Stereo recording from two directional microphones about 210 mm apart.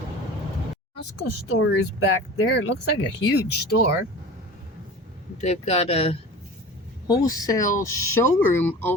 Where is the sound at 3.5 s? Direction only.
50° left (ahead or behind).